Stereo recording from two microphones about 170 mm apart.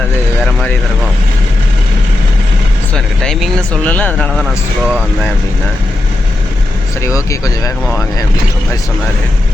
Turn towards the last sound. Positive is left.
turn(degrees=20)  # may be behind; listen again after turning